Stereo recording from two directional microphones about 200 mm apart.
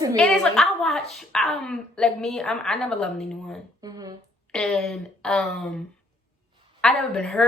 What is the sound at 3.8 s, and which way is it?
Speech, 20° right (ahead or behind).